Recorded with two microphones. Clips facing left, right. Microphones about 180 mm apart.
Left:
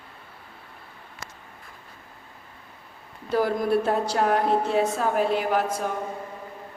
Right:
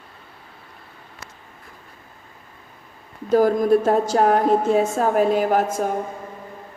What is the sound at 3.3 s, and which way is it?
A woman's voice, 45° right (ahead or behind).